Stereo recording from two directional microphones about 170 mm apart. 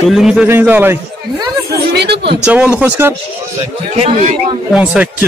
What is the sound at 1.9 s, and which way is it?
Speech, 75° right (ahead or behind).